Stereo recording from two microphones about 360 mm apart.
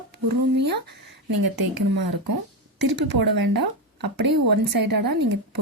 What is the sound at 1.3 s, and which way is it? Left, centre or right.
Speech, right.